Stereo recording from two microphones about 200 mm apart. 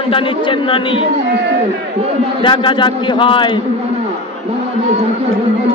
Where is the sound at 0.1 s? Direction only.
25° left (ahead or behind).